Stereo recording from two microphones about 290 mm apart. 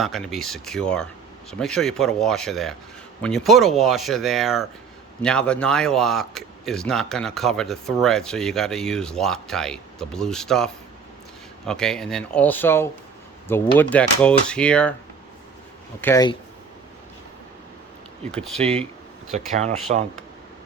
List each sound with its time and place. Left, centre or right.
0.0 s a man's voice: centre
16.0 s speech: centre
18.3 s a man's voice: centre
19.3 s speech: right